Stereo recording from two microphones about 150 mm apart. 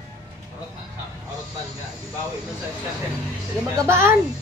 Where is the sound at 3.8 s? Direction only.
15° right (ahead or behind).